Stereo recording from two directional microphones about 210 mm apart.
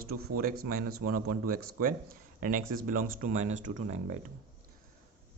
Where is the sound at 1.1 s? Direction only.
90° right.